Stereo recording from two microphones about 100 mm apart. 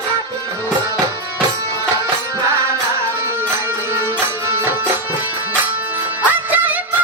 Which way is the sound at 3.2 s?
25° right (ahead or behind).